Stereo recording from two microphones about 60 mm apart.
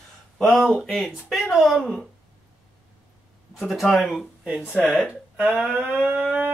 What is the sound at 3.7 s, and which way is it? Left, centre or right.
Speech, centre.